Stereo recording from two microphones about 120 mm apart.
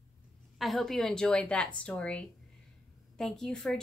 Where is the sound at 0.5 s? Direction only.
Centre (ahead or behind).